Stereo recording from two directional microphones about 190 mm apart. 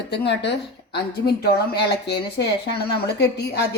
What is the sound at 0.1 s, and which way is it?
A woman's voice, 65° left (ahead or behind).